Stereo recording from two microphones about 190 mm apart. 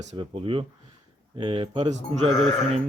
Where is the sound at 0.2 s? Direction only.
30° right (ahead or behind).